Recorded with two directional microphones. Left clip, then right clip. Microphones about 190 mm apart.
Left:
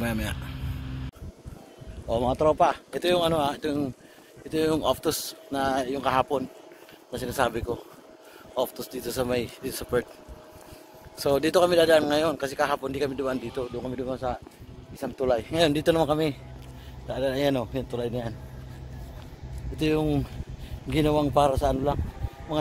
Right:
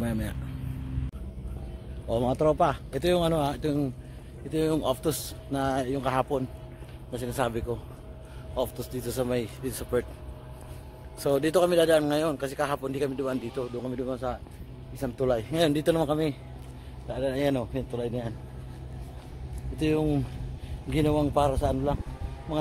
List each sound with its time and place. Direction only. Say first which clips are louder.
0.0 s speech: left 3 dB; centre (ahead or behind)
2.0 s speech: left 2 dB; 5° right (ahead or behind)
4.5 s a man's voice: left 2 dB; 15° left (ahead or behind)
5.5 s a man's voice: left 2 dB; 5° left (ahead or behind)
11.1 s a man's voice: left 2 dB; 10° left (ahead or behind)
19.8 s a man's voice: left 1 dB; 30° left (ahead or behind)